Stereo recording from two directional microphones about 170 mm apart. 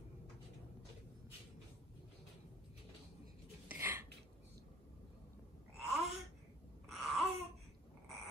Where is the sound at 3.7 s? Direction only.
15° right (ahead or behind).